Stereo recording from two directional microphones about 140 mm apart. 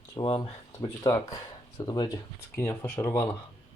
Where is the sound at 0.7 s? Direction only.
25° left (ahead or behind).